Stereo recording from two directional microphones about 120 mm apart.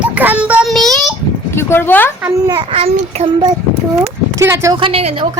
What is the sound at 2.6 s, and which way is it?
Speech, 55° right (ahead or behind).